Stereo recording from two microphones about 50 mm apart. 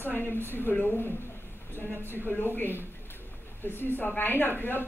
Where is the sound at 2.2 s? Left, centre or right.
Left.